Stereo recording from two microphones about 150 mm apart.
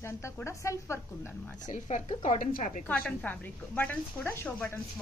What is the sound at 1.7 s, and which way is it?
A woman's voice, 50° left (ahead or behind).